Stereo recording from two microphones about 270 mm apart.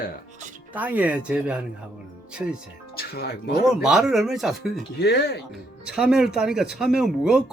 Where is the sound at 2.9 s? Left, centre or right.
Left.